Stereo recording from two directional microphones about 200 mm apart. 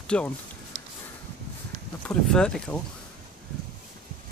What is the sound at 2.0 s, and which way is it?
Speech, 5° left (ahead or behind).